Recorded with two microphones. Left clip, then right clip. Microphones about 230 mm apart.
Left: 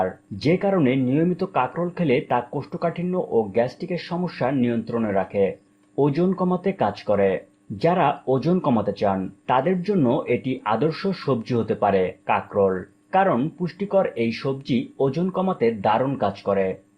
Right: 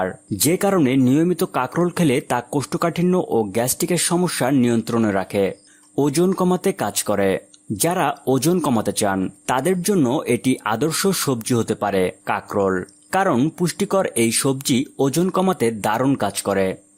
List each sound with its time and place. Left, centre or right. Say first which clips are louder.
0.0 s speech: right 2 dB; right